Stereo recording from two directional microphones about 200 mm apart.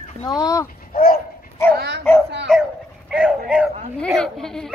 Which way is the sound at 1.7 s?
60° right (ahead or behind).